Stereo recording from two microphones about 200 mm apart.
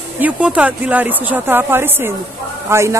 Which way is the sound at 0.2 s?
5° right (ahead or behind).